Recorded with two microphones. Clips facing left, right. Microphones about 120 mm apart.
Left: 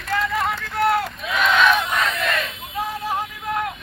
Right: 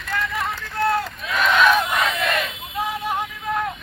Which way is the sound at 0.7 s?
25° left (ahead or behind).